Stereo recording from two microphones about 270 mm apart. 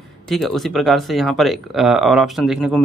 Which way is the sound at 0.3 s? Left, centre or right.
Centre.